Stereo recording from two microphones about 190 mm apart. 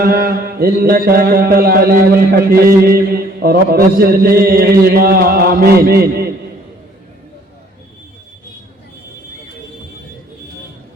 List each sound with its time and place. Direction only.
0.0 s mantra: 55° right (ahead or behind)